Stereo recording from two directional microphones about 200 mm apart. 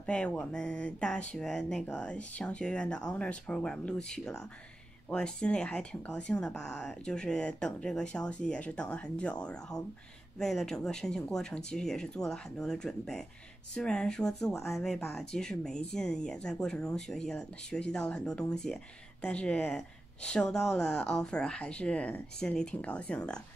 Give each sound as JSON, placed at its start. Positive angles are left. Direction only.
{"t": 0.0, "sound": "speech", "side_deg": 5}